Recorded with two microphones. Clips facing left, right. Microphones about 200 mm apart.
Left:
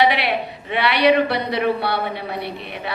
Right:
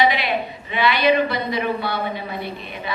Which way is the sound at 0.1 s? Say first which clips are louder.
Left 1 dB; 65° left (ahead or behind).